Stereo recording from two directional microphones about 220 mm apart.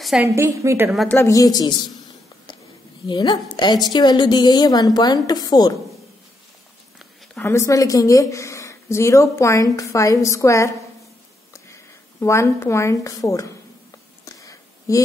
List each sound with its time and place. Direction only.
0.2 s a woman's voice: 15° right (ahead or behind)
0.8 s a woman's voice: centre (ahead or behind)
1.1 s speech: 15° left (ahead or behind)
3.1 s a woman's voice: 20° left (ahead or behind)
7.0 s speech: 10° left (ahead or behind)
11.7 s speech: 10° left (ahead or behind)
14.2 s a sound: 15° left (ahead or behind)